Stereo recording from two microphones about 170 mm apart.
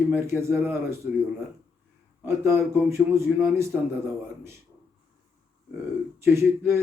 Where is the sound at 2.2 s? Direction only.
15° right (ahead or behind).